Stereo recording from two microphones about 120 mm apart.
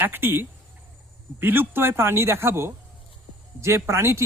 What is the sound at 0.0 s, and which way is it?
Speech, 20° right (ahead or behind).